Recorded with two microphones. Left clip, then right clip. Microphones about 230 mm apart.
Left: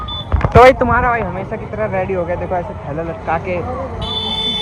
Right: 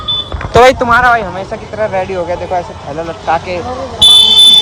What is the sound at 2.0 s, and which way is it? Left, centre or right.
Speech, right.